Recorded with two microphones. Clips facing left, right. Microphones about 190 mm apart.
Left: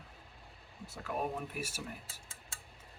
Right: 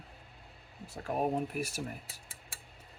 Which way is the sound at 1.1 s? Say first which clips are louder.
Right 6 dB; 45° right (ahead or behind).